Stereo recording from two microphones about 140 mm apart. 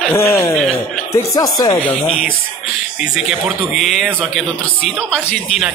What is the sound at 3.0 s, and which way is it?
Speech, 5° right (ahead or behind).